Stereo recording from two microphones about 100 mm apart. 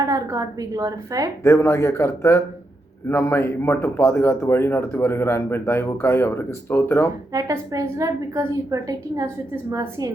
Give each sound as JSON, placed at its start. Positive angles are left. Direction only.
{"t": 0.0, "sound": "a woman's voice", "side_deg": -35}
{"t": 1.5, "sound": "speech", "side_deg": 30}
{"t": 7.3, "sound": "a woman's voice", "side_deg": -35}